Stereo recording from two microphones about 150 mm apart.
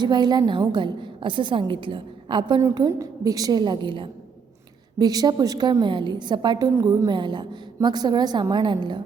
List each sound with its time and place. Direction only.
0.0 s a woman's voice: 30° right (ahead or behind)